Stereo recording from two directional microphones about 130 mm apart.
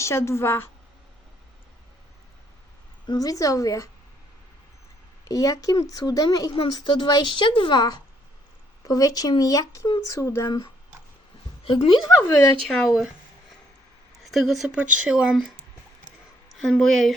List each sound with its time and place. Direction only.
0.0 s speech: 20° left (ahead or behind)
3.1 s speech: 25° left (ahead or behind)
5.3 s a woman's voice: 25° left (ahead or behind)
11.6 s a woman's voice: 45° left (ahead or behind)
12.0 s speech: 25° left (ahead or behind)
12.6 s speech: 5° left (ahead or behind)
14.3 s speech: centre (ahead or behind)
16.6 s speech: 5° left (ahead or behind)